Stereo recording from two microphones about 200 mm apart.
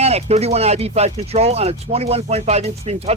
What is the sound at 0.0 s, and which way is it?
Speech, 30° right (ahead or behind).